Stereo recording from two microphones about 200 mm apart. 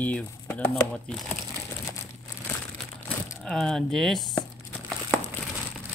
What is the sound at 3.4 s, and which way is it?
Speech, centre (ahead or behind).